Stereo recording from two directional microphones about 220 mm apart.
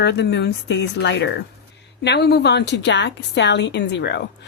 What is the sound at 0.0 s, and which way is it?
A woman's voice, 50° left (ahead or behind).